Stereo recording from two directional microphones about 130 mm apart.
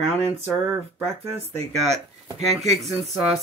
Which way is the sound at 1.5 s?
55° right (ahead or behind).